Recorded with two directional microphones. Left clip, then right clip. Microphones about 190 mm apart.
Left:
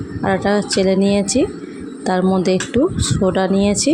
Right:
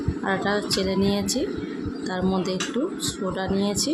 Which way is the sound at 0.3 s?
30° left (ahead or behind).